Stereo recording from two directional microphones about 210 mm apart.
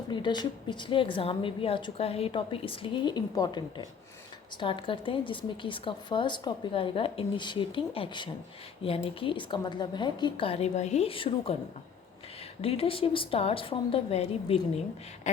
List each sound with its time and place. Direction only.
0.1 s a woman's voice: 20° left (ahead or behind)
12.6 s a woman's voice: 25° left (ahead or behind)